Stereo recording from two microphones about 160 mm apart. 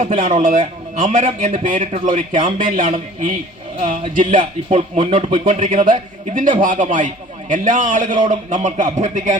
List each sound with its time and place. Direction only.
0.0 s speech: 55° right (ahead or behind)